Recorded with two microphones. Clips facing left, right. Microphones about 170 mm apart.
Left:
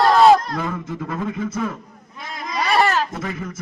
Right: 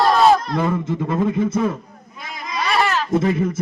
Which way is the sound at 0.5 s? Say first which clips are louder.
Right 6 dB; 25° right (ahead or behind).